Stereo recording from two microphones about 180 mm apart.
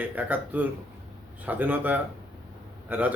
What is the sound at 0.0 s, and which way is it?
Speech, 10° right (ahead or behind).